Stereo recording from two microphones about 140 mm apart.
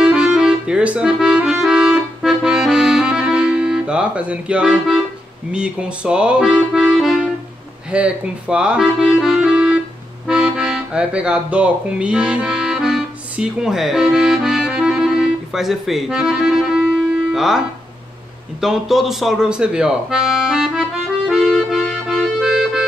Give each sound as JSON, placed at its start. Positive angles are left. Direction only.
{"t": 0.0, "sound": "music", "side_deg": -5}
{"t": 7.9, "sound": "speech", "side_deg": -10}
{"t": 10.2, "sound": "accordion", "side_deg": -5}
{"t": 18.6, "sound": "speech", "side_deg": 0}
{"t": 21.3, "sound": "accordion", "side_deg": -5}